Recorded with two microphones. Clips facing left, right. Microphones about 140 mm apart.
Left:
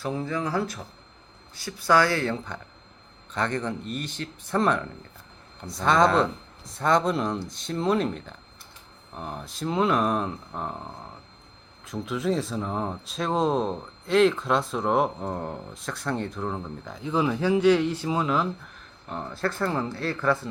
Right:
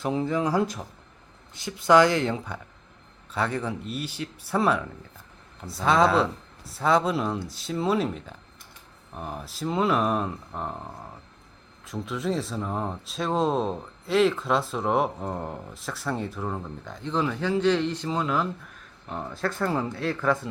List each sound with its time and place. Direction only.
0.0 s speech: 15° right (ahead or behind); by 20.1 s 5° left (ahead or behind)
20.1 s speech: 10° right (ahead or behind)